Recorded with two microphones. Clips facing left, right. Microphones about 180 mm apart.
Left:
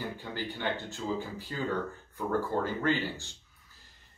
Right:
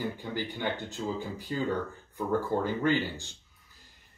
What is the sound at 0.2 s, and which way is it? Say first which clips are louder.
Speech: right 2 dB; 15° right (ahead or behind).